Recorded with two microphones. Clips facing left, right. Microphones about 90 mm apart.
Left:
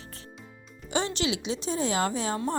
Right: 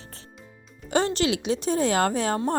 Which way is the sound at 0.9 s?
45° right (ahead or behind).